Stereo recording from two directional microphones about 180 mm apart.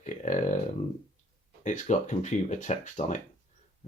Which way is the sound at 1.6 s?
40° left (ahead or behind).